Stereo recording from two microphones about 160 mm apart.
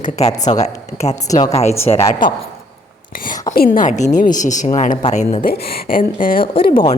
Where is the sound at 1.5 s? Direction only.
40° left (ahead or behind).